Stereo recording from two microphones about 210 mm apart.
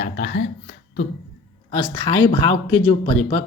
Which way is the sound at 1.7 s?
20° left (ahead or behind).